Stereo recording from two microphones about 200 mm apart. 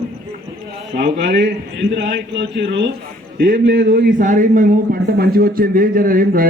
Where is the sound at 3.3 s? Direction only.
45° right (ahead or behind).